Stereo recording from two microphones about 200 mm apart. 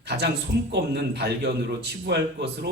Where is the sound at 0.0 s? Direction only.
55° right (ahead or behind).